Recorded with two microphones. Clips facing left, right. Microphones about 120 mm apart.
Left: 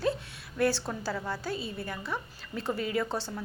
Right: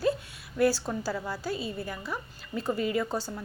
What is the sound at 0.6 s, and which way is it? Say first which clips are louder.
A woman's voice: right 3 dB; 5° right (ahead or behind).